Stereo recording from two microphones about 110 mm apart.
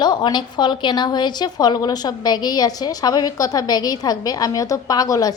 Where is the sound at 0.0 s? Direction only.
40° left (ahead or behind).